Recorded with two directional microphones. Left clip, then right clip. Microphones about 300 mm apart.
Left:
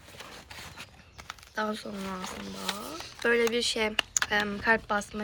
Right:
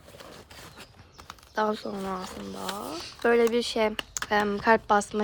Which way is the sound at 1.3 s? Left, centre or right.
Right.